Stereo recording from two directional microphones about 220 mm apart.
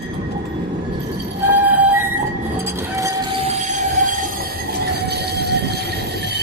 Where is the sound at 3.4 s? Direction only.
35° right (ahead or behind).